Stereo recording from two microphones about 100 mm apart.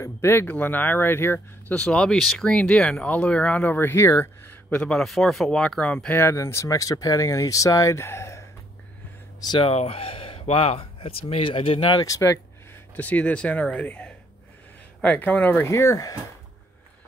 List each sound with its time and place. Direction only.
0.0 s speech: 25° left (ahead or behind)
4.6 s a man's voice: 15° left (ahead or behind)
4.9 s speech: centre (ahead or behind)
6.1 s speech: 25° left (ahead or behind)
9.6 s speech: 80° left; by 12.0 s 60° left (ahead or behind)
12.0 s speech: 30° left (ahead or behind)
12.9 s speech: 15° left (ahead or behind)
15.7 s speech: 30° left (ahead or behind)